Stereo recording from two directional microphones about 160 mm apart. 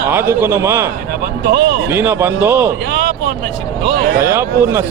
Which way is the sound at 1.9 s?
10° right (ahead or behind).